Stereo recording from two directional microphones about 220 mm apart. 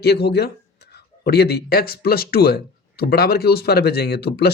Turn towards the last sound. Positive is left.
turn(degrees=45)  # may be behind; listen again after turning